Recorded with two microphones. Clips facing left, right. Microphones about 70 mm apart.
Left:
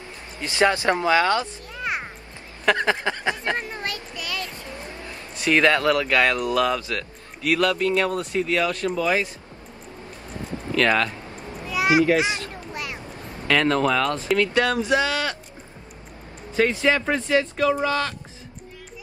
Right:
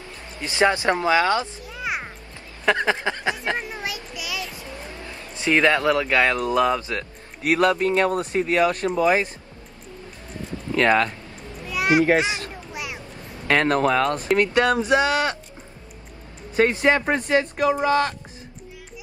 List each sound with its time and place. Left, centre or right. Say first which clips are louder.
0.4 s speech: even; right
1.7 s a sound: even; centre
2.8 s speech: even; centre
5.3 s speech: even; right
10.7 s speech: right 2 dB; right
11.7 s children playing: even; centre
12.2 s speech: even; right
12.7 s a sound: even; centre
13.5 s speech: right 1 dB; right
16.5 s speech: right 2 dB; right